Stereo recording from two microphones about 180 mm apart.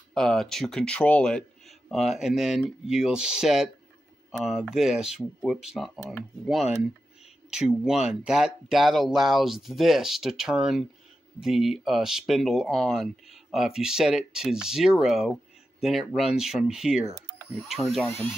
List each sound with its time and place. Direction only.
0.1 s speech: centre (ahead or behind)